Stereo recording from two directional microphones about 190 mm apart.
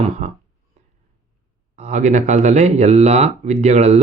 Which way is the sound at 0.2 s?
40° right (ahead or behind).